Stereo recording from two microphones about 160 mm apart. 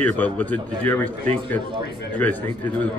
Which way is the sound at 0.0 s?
10° left (ahead or behind).